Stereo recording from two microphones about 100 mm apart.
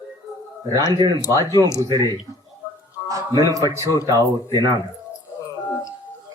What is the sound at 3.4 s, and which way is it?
A man's voice, 35° right (ahead or behind).